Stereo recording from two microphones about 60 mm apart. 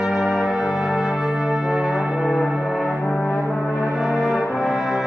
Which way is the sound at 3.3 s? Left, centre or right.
Left.